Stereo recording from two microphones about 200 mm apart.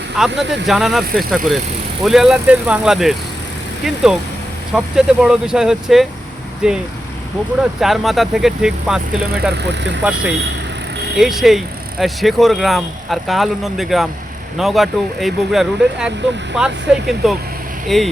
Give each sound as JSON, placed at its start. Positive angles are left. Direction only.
{"t": 0.2, "sound": "speech", "side_deg": 0}
{"t": 9.6, "sound": "speech", "side_deg": -60}
{"t": 10.0, "sound": "speech", "side_deg": -5}